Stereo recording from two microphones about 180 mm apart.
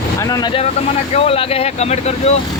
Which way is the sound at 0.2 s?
20° left (ahead or behind).